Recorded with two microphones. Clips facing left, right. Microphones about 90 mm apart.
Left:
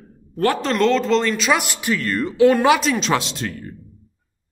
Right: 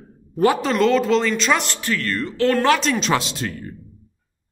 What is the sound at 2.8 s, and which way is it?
Speech, centre (ahead or behind).